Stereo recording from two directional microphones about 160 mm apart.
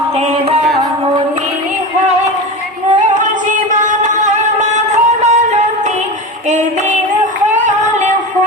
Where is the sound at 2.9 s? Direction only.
50° right (ahead or behind).